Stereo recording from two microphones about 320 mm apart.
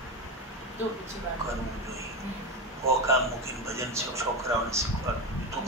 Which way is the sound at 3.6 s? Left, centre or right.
Centre.